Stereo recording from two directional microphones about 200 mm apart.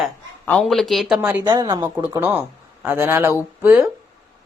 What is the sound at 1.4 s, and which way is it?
Speech, 15° right (ahead or behind).